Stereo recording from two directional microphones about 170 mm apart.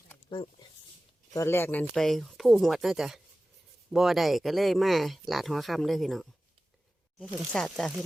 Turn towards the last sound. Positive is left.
turn(degrees=5)  # may be behind; listen again after turning